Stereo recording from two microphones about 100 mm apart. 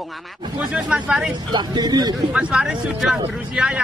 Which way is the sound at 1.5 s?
45° right (ahead or behind).